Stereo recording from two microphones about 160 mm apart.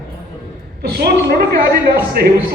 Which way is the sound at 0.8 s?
85° right.